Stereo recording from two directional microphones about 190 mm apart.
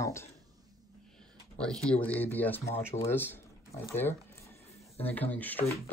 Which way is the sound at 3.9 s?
10° left (ahead or behind).